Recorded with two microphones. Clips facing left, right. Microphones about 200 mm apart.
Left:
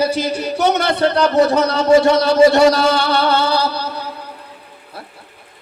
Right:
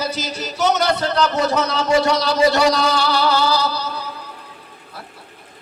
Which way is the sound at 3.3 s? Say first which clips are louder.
Left 2 dB; 25° left (ahead or behind).